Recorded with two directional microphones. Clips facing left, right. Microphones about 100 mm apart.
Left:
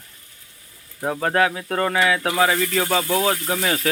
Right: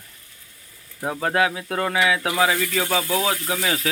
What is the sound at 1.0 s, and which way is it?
Speech, centre (ahead or behind).